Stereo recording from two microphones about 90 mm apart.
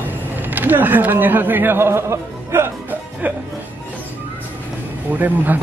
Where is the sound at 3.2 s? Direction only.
15° right (ahead or behind).